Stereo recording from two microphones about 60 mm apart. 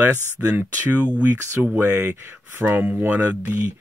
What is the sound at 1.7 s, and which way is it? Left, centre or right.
Speech, right.